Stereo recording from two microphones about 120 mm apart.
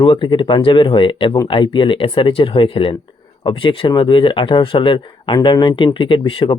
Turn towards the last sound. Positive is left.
turn(degrees=45)  # may be behind; listen again after turning